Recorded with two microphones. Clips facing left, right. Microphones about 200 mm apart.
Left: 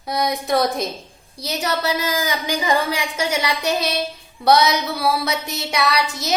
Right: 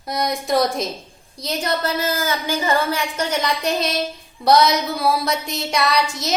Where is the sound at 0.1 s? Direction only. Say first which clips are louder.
Even; centre (ahead or behind).